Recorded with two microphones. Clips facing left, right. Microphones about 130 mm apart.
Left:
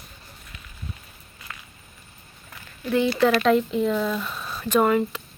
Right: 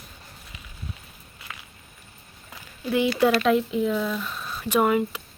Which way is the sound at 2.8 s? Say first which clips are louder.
Left 1 dB; 10° right (ahead or behind).